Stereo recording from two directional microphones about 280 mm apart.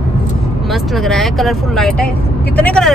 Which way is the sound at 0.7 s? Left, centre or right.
Centre.